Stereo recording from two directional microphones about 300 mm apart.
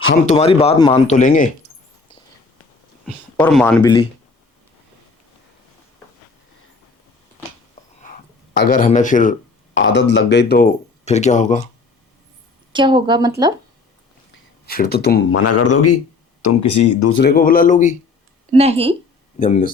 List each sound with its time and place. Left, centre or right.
0.3 s speech: left
3.3 s speech: centre
8.0 s a sound: left
10.0 s speech: left
12.7 s a woman's voice: centre
14.7 s speech: left
15.4 s a man's voice: left
16.4 s speech: left
17.1 s speech: left
18.5 s speech: centre
19.4 s speech: left